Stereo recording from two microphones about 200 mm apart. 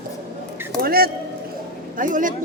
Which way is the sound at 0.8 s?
50° right (ahead or behind).